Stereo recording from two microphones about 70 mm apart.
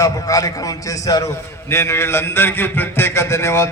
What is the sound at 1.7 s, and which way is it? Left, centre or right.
A man's voice, left.